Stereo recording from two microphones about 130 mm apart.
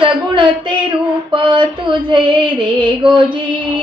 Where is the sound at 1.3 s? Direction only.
40° right (ahead or behind).